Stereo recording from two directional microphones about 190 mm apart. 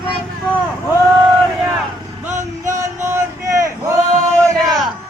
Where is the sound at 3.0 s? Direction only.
15° right (ahead or behind).